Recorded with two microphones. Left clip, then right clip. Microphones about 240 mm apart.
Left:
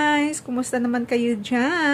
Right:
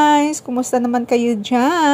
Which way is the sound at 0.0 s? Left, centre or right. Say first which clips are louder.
Right 7 dB; right.